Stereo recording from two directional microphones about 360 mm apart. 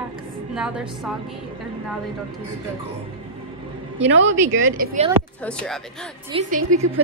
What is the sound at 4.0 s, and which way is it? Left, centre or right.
Speech, right.